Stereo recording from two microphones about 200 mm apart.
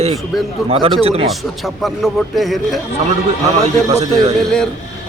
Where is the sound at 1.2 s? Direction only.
Centre (ahead or behind).